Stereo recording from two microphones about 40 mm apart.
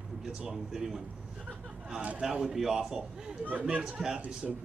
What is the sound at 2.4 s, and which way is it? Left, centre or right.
Speech, centre.